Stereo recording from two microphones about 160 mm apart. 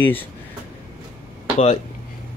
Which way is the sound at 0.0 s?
10° left (ahead or behind).